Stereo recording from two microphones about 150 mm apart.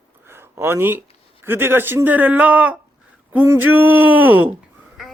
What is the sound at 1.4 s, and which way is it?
Speech, 15° right (ahead or behind).